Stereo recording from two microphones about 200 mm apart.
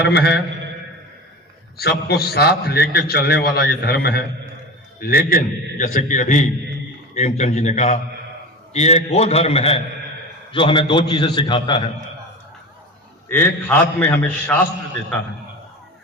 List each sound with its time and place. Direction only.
0.0 s a sound: 55° left (ahead or behind)
1.8 s a man's voice: 55° left (ahead or behind); by 11.9 s 25° left (ahead or behind)
13.2 s a man's voice: 10° left (ahead or behind)